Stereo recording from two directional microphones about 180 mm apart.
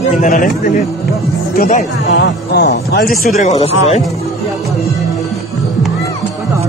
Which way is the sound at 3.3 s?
40° left (ahead or behind).